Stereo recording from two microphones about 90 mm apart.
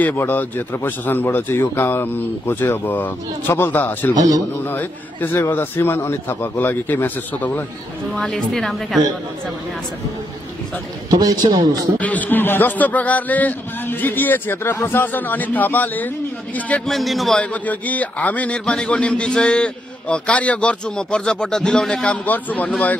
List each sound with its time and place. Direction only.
0.0 s speech: 20° left (ahead or behind)
4.1 s a man's voice: 45° right (ahead or behind)
4.6 s speech: 20° left (ahead or behind)
8.1 s a woman's voice: 5° left (ahead or behind)
11.1 s a man's voice: 45° right (ahead or behind)
12.0 s a man's voice: 20° left (ahead or behind)
16.8 s a woman's voice: centre (ahead or behind)
17.4 s a man's voice: 15° left (ahead or behind)